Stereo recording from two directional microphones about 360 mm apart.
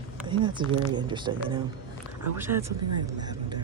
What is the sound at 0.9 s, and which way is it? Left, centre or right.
A man's voice, centre.